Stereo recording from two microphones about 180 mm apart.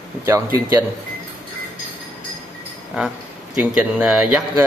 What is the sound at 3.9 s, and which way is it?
Speech, 5° right (ahead or behind).